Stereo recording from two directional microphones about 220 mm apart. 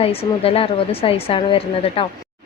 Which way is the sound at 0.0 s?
25° left (ahead or behind).